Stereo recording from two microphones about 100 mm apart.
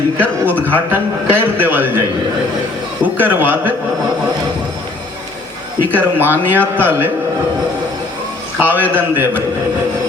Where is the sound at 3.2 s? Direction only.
20° right (ahead or behind).